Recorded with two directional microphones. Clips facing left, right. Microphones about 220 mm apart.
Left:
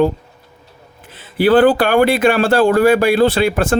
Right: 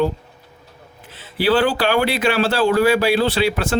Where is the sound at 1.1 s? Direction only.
50° left (ahead or behind).